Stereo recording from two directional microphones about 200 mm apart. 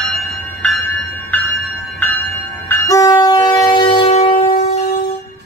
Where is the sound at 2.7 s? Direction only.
15° left (ahead or behind); by 4.5 s 30° left (ahead or behind).